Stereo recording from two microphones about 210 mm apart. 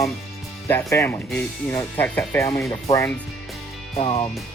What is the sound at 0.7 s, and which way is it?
Speech, 15° left (ahead or behind).